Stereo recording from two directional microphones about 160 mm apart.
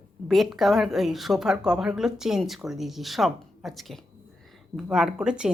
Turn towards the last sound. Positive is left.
turn(degrees=-5)  # may be behind; listen again after turning